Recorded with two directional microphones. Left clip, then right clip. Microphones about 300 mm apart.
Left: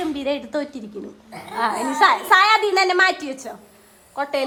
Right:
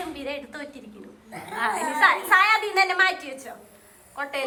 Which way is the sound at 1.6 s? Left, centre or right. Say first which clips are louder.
Left 3 dB; centre.